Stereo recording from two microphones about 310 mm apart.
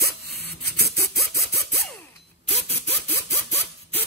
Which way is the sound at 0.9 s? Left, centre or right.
Centre.